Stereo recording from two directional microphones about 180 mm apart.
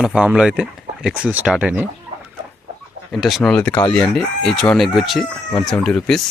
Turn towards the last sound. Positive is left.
turn(degrees=5)  # may be behind; listen again after turning